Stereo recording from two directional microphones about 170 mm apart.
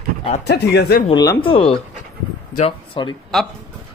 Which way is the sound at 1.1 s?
20° left (ahead or behind).